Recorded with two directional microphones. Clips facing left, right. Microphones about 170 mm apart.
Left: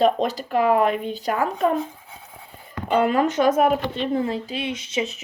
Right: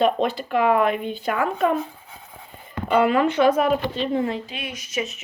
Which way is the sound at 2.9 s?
40° left (ahead or behind).